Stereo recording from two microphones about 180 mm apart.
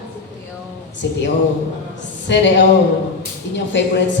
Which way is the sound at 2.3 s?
75° left (ahead or behind).